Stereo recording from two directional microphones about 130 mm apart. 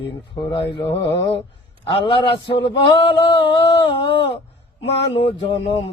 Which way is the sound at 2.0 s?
40° left (ahead or behind).